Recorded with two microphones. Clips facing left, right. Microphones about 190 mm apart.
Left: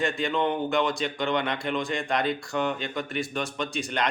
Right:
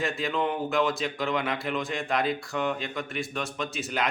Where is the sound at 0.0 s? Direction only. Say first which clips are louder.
Left 2 dB; centre (ahead or behind).